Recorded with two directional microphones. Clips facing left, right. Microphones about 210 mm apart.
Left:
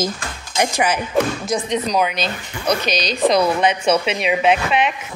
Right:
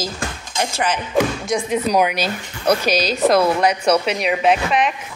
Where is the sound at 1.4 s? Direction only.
Centre (ahead or behind).